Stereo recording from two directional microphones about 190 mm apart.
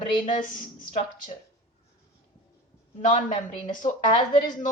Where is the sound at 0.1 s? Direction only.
25° left (ahead or behind).